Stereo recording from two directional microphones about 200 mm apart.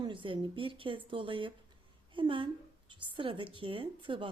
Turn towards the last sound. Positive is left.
turn(degrees=-25)  # may be behind; listen again after turning